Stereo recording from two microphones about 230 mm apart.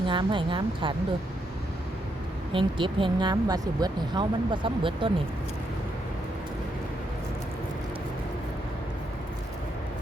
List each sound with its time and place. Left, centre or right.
0.1 s speech: right
2.5 s speech: right